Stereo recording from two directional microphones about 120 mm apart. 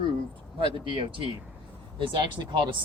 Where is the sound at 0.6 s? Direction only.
45° right (ahead or behind).